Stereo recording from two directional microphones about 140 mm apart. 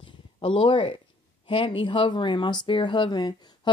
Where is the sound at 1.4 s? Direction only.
40° left (ahead or behind).